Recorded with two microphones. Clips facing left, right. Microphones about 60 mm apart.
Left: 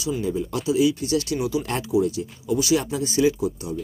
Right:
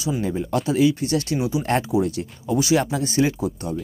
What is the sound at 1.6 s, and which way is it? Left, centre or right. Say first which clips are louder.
Speech: right 2 dB; right.